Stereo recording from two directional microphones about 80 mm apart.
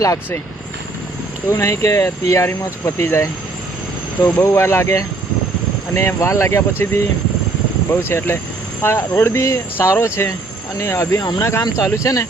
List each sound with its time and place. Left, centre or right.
1.5 s speech: left
4.3 s speech: left